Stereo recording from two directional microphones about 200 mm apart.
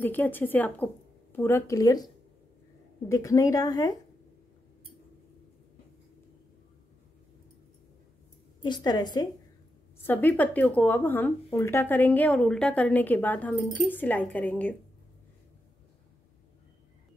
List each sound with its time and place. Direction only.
0.0 s speech: 10° left (ahead or behind)
3.1 s speech: 15° left (ahead or behind)
8.6 s a woman's voice: 20° left (ahead or behind)
10.0 s speech: 10° left (ahead or behind)